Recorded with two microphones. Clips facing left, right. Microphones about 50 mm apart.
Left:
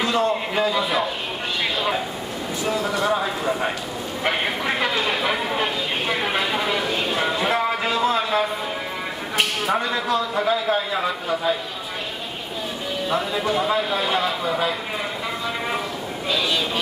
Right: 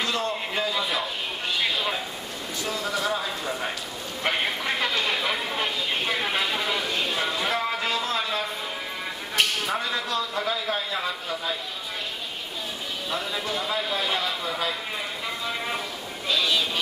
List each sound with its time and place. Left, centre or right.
0.0 s a man's voice: centre
2.7 s a man's voice: centre
13.1 s a man's voice: centre
16.3 s vehicle: centre